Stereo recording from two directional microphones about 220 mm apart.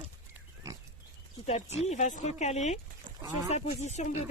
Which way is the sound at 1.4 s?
30° left (ahead or behind).